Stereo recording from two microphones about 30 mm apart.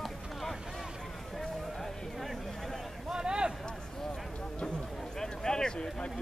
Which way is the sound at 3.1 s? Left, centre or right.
Right.